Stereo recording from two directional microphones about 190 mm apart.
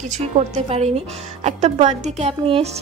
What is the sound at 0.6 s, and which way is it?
A woman's voice, 35° right (ahead or behind).